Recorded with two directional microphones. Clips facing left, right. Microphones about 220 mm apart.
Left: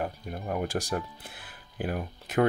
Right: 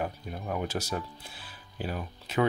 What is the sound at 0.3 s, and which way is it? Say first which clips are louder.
Speech: left 4 dB; 45° left (ahead or behind).